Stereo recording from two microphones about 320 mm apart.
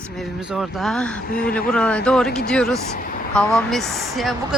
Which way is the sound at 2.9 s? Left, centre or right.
Left.